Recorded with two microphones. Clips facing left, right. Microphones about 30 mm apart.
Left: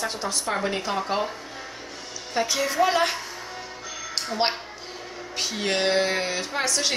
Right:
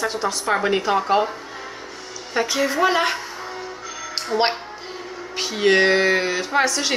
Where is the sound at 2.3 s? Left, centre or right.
Centre.